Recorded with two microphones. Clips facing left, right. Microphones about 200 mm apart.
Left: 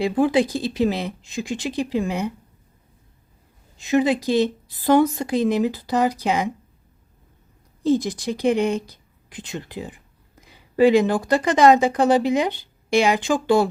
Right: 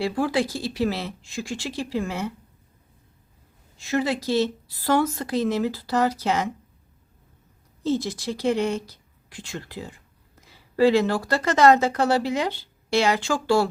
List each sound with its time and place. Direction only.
0.0 s speech: 20° left (ahead or behind)
3.8 s speech: 20° left (ahead or behind)
7.9 s speech: 15° left (ahead or behind)